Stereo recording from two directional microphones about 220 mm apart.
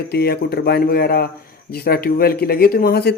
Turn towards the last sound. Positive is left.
turn(degrees=45)  # may be behind; listen again after turning